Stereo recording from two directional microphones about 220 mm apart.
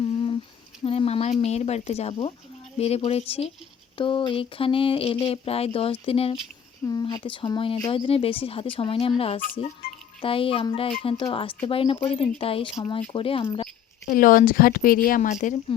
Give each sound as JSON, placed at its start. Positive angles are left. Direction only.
{"t": 0.0, "sound": "a sound", "side_deg": 25}
{"t": 0.9, "sound": "speech", "side_deg": 25}
{"t": 14.0, "sound": "speech", "side_deg": 45}